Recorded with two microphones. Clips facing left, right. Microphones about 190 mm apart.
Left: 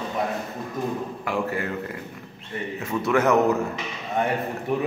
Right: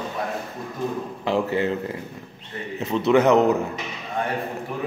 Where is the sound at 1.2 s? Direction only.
25° right (ahead or behind).